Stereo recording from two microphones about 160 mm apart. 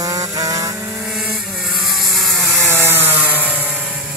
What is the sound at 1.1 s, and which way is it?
Vehicle, 5° right (ahead or behind).